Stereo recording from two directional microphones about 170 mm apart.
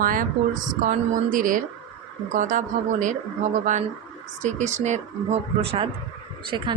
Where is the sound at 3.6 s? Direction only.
45° right (ahead or behind); by 6.7 s 25° right (ahead or behind).